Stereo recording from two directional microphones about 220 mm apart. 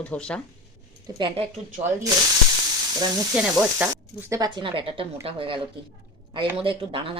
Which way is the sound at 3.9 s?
15° right (ahead or behind).